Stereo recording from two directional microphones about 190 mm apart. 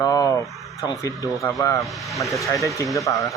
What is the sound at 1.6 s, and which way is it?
Speech, 15° left (ahead or behind).